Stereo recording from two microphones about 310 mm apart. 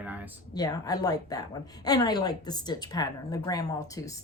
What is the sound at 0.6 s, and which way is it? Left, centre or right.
Speech, centre.